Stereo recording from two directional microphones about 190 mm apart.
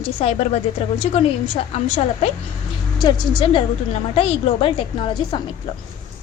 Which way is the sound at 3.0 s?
25° left (ahead or behind).